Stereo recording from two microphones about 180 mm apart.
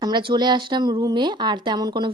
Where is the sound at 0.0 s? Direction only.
25° right (ahead or behind).